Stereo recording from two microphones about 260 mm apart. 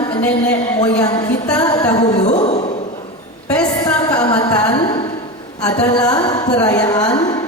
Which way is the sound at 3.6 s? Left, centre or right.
Centre.